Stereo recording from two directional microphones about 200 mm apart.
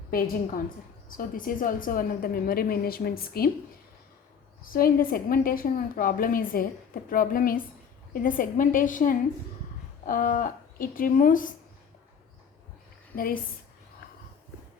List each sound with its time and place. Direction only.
0.1 s a woman's voice: 45° left (ahead or behind)
4.7 s a woman's voice: 45° left (ahead or behind)
13.1 s a woman's voice: 45° left (ahead or behind)